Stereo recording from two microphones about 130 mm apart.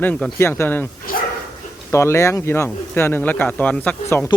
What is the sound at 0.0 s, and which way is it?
Speech, 15° left (ahead or behind).